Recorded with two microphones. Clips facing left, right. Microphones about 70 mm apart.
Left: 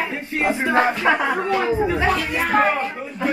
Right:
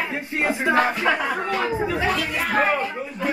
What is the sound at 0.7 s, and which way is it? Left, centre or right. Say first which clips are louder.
Speech: left 5 dB; centre.